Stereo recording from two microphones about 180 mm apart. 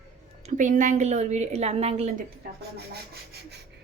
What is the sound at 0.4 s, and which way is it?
A woman's voice, 45° right (ahead or behind).